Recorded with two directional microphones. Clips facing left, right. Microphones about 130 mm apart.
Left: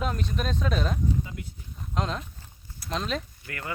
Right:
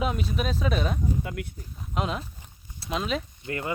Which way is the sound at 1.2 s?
65° right (ahead or behind).